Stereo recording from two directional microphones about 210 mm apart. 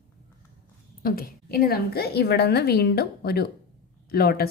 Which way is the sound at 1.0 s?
45° left (ahead or behind).